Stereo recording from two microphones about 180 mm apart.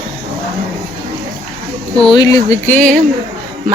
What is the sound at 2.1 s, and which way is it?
Speech, 20° left (ahead or behind).